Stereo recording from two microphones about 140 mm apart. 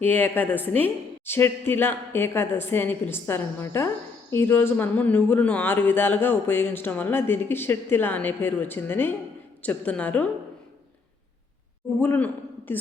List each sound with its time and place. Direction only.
0.0 s a man's voice: 15° left (ahead or behind)
11.9 s a man's voice: 15° left (ahead or behind)